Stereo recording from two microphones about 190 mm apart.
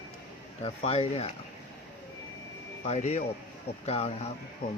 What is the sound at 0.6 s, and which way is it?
Speech, 30° left (ahead or behind).